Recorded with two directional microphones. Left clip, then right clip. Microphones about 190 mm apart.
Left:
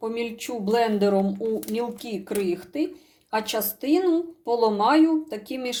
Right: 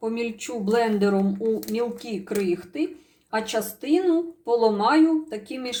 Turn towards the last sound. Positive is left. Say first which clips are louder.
# left 1 dB
turn(degrees=10)  # may be behind; listen again after turning